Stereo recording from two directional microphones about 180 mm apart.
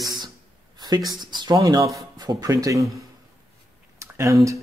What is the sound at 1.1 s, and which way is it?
Speech, 25° right (ahead or behind).